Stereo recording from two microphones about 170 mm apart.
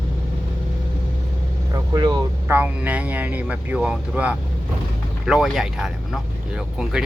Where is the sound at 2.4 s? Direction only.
10° right (ahead or behind).